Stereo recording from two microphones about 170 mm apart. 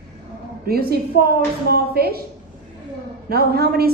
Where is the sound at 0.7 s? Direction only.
65° right (ahead or behind).